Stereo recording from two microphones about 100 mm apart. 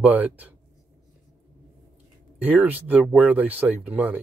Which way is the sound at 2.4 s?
15° right (ahead or behind).